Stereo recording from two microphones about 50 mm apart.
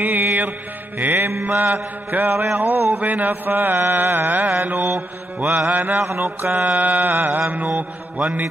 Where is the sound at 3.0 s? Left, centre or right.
Right.